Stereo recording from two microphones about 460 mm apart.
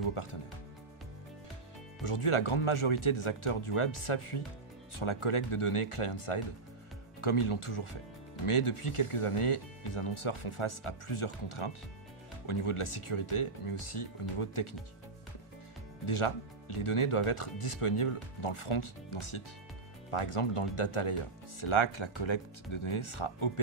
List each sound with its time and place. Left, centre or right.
0.1 s speech: left
2.0 s speech: left
16.1 s speech: left